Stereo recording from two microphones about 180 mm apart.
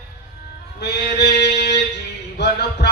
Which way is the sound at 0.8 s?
70° left (ahead or behind).